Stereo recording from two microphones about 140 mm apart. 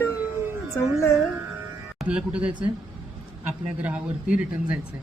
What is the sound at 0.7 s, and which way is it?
Speech, 20° left (ahead or behind).